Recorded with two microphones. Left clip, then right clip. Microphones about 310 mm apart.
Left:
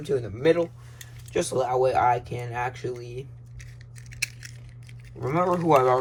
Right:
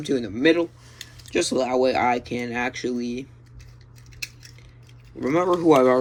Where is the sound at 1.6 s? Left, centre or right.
Centre.